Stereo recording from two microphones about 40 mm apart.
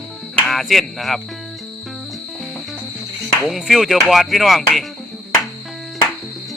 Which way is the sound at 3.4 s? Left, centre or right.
Centre.